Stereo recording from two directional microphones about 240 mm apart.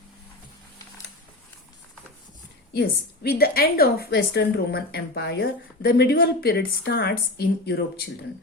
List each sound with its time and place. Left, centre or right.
2.7 s a woman's voice: left